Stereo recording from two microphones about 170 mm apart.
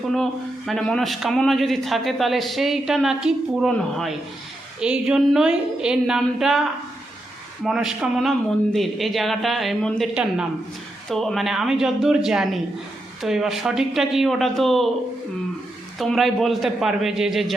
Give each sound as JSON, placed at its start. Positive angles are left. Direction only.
{"t": 0.1, "sound": "a man's voice", "side_deg": 0}
{"t": 7.6, "sound": "a man's voice", "side_deg": 0}
{"t": 11.1, "sound": "a man's voice", "side_deg": 0}
{"t": 16.0, "sound": "a man's voice", "side_deg": 0}